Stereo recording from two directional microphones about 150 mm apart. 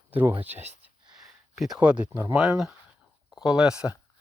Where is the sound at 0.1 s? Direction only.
10° right (ahead or behind).